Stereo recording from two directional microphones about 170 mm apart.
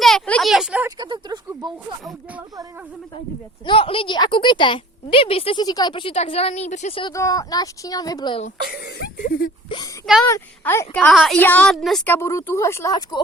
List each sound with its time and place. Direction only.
0.0 s a sound: 5° left (ahead or behind)
0.9 s a sound: 25° right (ahead or behind)
3.7 s a woman's voice: 30° left (ahead or behind)
7.0 s a woman's voice: 20° left (ahead or behind)
8.7 s speech: 60° left (ahead or behind)
10.2 s speech: 15° left (ahead or behind)
11.1 s a woman's voice: centre (ahead or behind)
11.3 s speech: 10° left (ahead or behind)
12.1 s speech: 15° left (ahead or behind)